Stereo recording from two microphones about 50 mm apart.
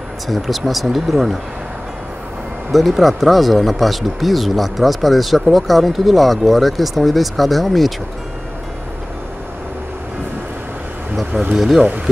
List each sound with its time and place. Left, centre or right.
0.3 s speech: centre
2.7 s speech: centre
11.5 s speech: centre